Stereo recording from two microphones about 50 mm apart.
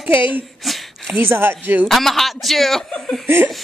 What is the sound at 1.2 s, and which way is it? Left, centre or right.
Speech, right.